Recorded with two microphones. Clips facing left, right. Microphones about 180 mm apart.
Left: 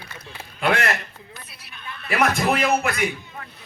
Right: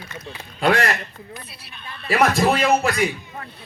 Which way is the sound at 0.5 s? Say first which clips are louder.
Right 3 dB; 35° right (ahead or behind).